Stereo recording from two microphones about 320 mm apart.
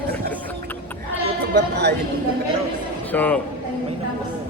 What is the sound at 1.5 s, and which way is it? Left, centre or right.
Speech, right.